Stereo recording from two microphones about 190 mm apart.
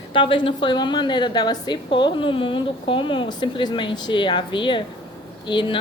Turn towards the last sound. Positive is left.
turn(degrees=25)  # may be behind; listen again after turning